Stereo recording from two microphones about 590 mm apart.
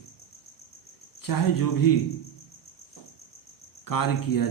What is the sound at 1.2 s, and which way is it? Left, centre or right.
Speech, left.